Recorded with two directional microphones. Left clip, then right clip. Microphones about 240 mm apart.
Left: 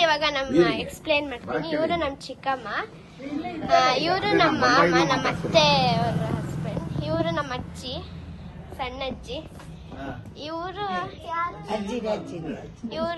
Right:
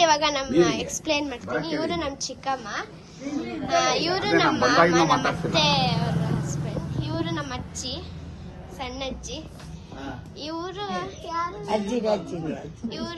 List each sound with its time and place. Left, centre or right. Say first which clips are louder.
0.0 s a woman's voice: right 1 dB; centre
10.4 s a woman's voice: left 1 dB; centre
11.7 s a woman's voice: right 8 dB; right
12.9 s a woman's voice: left 7 dB; centre